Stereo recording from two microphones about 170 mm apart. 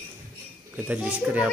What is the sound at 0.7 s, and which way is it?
Speech, 10° right (ahead or behind).